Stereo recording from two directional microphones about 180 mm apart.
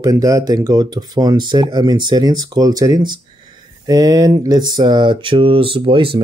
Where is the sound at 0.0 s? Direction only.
20° right (ahead or behind).